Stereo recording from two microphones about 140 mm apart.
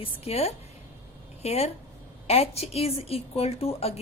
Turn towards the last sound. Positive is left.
turn(degrees=45)  # may be behind; listen again after turning